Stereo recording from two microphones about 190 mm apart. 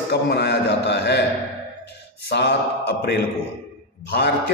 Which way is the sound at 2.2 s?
60° left (ahead or behind).